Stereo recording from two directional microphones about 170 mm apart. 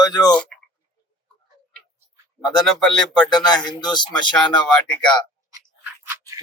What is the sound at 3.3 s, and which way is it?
Speech, 25° left (ahead or behind).